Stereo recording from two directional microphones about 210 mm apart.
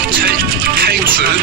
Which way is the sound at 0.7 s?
45° right (ahead or behind).